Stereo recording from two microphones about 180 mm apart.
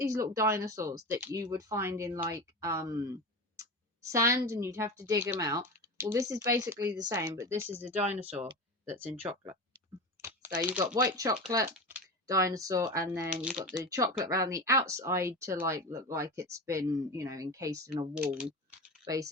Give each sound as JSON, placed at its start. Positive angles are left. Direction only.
{"t": 0.0, "sound": "speech", "side_deg": -20}
{"t": 10.2, "sound": "typing", "side_deg": -15}
{"t": 10.7, "sound": "speech", "side_deg": -10}
{"t": 11.0, "sound": "speech", "side_deg": -20}
{"t": 13.6, "sound": "speech", "side_deg": -5}
{"t": 13.8, "sound": "speech", "side_deg": -20}
{"t": 19.0, "sound": "speech", "side_deg": -20}